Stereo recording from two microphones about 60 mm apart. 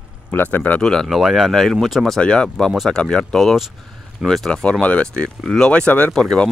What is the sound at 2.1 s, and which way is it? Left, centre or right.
Speech, centre.